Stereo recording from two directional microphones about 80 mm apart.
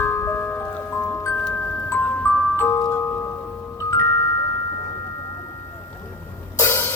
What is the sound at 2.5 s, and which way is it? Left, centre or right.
Glockenspiel, left.